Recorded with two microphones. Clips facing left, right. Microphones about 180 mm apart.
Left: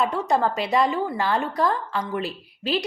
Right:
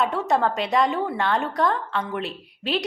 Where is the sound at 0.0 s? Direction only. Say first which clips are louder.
Even; centre (ahead or behind).